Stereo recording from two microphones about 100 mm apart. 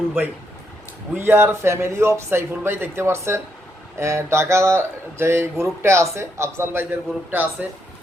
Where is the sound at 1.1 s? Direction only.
20° right (ahead or behind).